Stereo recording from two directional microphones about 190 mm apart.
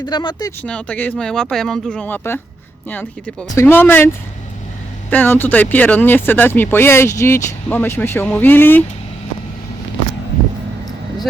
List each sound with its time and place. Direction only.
0.0 s speech: 25° left (ahead or behind)
0.6 s speech: 5° left (ahead or behind)
5.1 s speech: 10° left (ahead or behind)